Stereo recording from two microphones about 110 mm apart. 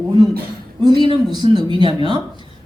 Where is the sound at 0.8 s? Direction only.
40° right (ahead or behind).